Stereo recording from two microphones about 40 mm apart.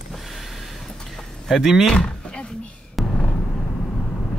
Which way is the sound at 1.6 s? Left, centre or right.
Centre.